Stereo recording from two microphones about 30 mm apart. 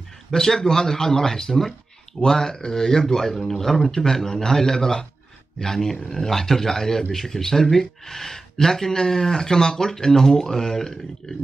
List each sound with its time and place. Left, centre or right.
0.3 s a man's voice: centre